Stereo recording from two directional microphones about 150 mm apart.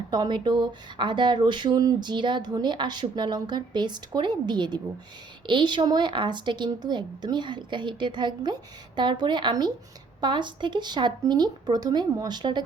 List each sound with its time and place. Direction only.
0.1 s speech: 30° right (ahead or behind)